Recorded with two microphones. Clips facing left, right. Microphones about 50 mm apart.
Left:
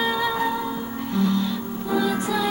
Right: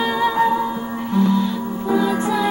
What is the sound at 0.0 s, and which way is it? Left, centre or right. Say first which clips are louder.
Music: right 5 dB; centre.